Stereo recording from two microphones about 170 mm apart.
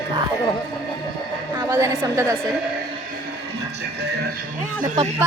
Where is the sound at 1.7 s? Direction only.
15° right (ahead or behind).